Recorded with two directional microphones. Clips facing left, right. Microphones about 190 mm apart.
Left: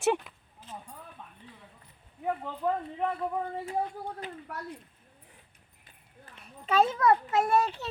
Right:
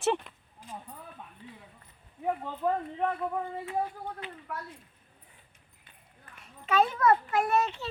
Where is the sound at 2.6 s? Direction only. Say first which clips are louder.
Right 1 dB; 5° left (ahead or behind).